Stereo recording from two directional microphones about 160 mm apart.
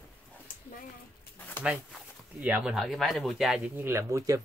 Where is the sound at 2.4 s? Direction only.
10° right (ahead or behind).